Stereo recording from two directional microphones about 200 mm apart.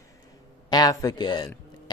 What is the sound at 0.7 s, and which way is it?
Speech, 20° left (ahead or behind).